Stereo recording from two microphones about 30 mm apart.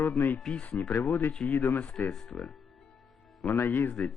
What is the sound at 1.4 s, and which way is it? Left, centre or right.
Speech, left.